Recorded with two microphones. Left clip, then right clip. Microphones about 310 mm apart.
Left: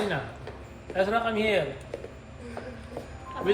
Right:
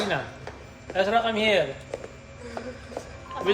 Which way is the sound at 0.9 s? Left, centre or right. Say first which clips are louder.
Right 3 dB; right.